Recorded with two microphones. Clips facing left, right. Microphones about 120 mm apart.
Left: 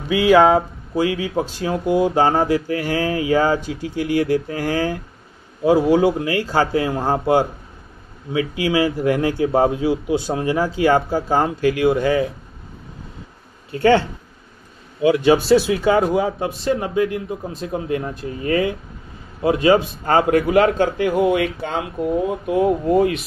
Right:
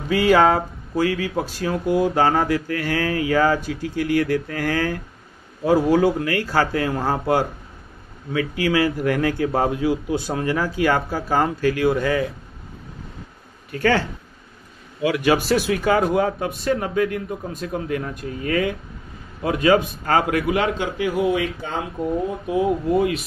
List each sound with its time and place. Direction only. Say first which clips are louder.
0.1 s speech: left 3 dB; 10° left (ahead or behind)
0.9 s speech: left 2 dB; 20° left (ahead or behind)
13.7 s speech: left 5 dB; 25° left (ahead or behind)
15.6 s speech: left 2 dB; 15° left (ahead or behind)
16.3 s speech: left 2 dB; 25° left (ahead or behind)
17.0 s speech: left 2 dB; 10° left (ahead or behind)
17.7 s a man's voice: left 3 dB; 25° left (ahead or behind); by 22.9 s 60° left (ahead or behind)